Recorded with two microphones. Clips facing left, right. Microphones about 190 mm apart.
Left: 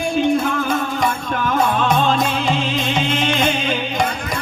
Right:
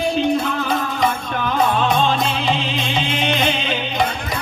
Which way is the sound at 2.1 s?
45° left (ahead or behind).